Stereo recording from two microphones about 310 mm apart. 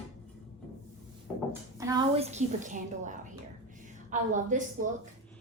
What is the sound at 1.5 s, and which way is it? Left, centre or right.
A woman's voice, centre.